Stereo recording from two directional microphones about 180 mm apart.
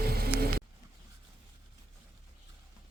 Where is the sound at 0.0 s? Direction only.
60° right (ahead or behind).